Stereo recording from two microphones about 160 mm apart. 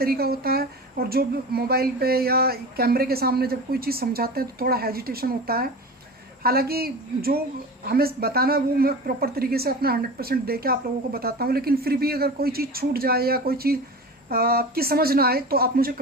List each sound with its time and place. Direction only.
0.0 s speech: 70° right (ahead or behind)